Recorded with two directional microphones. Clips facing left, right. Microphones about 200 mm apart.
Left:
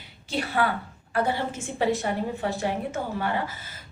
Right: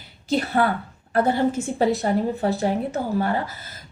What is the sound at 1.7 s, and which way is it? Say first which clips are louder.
A woman's voice: even; 40° right (ahead or behind).